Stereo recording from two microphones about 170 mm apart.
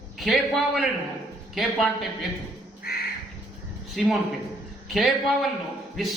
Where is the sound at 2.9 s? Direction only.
65° left (ahead or behind).